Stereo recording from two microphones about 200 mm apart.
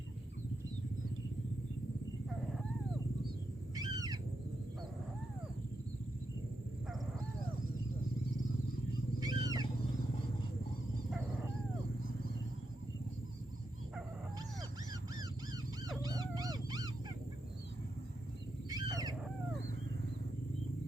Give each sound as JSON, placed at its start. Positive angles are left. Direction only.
{"t": 3.8, "sound": "owl", "side_deg": -20}
{"t": 9.2, "sound": "wild animals", "side_deg": -20}
{"t": 16.0, "sound": "dog", "side_deg": -20}
{"t": 18.7, "sound": "a sound", "side_deg": -20}